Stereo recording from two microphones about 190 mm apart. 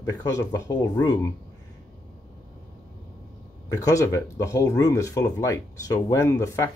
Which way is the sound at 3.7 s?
15° left (ahead or behind).